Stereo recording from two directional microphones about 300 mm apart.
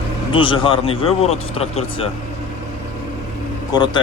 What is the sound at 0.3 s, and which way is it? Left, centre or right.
Speech, centre.